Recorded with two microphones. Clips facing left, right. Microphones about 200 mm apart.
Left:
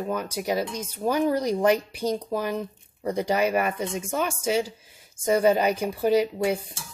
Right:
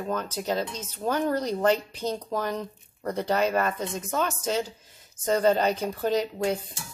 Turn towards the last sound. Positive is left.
turn(degrees=10)  # may be behind; listen again after turning